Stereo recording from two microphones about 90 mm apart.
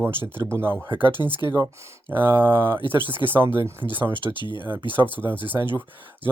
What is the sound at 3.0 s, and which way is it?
Speech, 60° left (ahead or behind).